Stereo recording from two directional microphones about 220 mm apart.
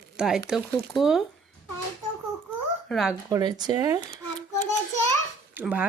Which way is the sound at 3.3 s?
15° right (ahead or behind).